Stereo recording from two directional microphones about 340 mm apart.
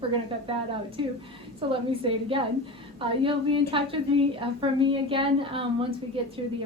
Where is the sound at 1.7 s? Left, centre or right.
Centre.